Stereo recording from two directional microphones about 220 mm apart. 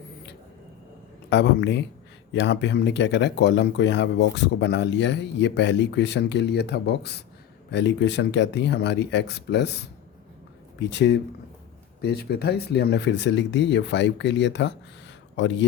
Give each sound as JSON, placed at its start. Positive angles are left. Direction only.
{"t": 1.3, "sound": "speech", "side_deg": 50}